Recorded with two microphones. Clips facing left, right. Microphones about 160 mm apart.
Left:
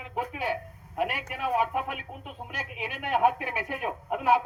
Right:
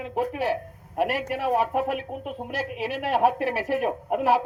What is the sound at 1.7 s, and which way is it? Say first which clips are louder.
Speech: right 6 dB; 50° right (ahead or behind).